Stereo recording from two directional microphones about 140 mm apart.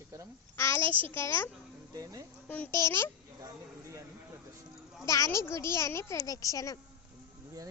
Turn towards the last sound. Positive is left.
turn(degrees=25)  # may be behind; listen again after turning